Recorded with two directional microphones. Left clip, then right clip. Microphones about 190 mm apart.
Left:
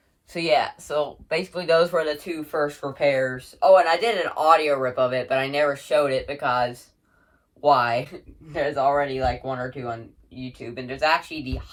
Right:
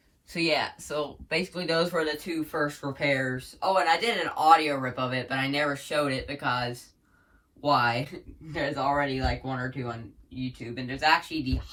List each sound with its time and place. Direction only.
0.3 s speech: 30° left (ahead or behind)
7.6 s speech: 30° left (ahead or behind)